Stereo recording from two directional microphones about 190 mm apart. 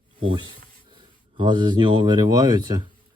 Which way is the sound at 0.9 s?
25° right (ahead or behind).